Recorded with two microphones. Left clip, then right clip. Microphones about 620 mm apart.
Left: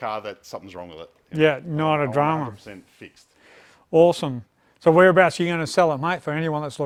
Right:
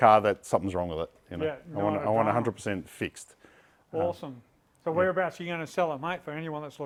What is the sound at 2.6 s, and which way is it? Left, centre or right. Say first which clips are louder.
Speech: right 8 dB; right.